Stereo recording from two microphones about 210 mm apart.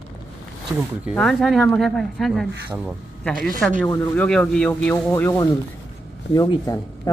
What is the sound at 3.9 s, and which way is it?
Speech, 10° left (ahead or behind).